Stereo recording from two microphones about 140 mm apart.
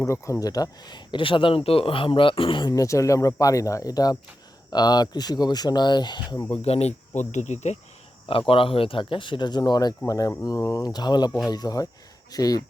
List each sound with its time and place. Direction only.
0.0 s speech: 20° left (ahead or behind)
6.5 s speech: 45° left (ahead or behind)
8.3 s speech: 40° left (ahead or behind)